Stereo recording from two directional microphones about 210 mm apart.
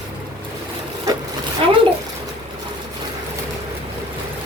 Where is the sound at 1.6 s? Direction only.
25° right (ahead or behind).